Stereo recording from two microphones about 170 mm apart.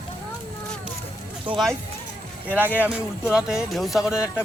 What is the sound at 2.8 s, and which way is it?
Speech, 5° right (ahead or behind).